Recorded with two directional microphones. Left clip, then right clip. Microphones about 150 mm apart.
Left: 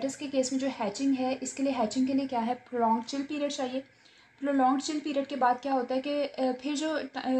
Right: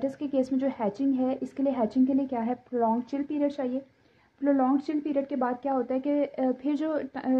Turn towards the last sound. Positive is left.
turn(degrees=-50)  # may be behind; listen again after turning